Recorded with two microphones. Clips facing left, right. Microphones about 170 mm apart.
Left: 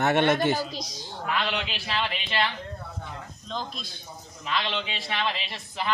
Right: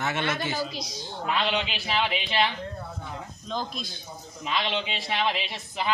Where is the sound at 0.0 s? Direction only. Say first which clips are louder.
Left 7 dB; 60° left (ahead or behind).